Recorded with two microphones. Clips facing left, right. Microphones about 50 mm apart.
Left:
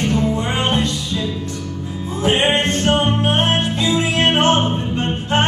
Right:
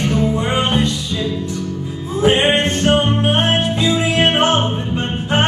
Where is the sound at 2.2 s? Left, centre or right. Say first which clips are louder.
Right 2 dB; centre.